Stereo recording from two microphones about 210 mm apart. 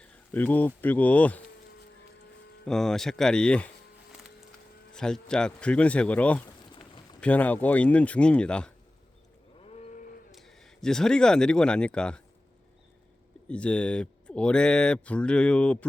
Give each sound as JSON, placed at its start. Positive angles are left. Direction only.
{"t": 0.0, "sound": "speech", "side_deg": 5}
{"t": 2.6, "sound": "speech", "side_deg": 0}
{"t": 4.9, "sound": "speech", "side_deg": 5}
{"t": 6.7, "sound": "a sound", "side_deg": 25}
{"t": 7.2, "sound": "speech", "side_deg": 5}
{"t": 9.6, "sound": "livestock", "side_deg": 30}
{"t": 10.3, "sound": "speech", "side_deg": 0}
{"t": 13.5, "sound": "speech", "side_deg": 5}